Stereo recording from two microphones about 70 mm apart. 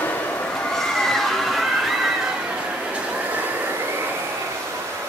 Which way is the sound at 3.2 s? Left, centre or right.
Right.